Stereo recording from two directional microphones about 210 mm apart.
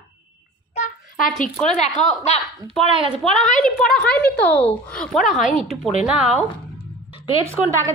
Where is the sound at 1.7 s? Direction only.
30° left (ahead or behind).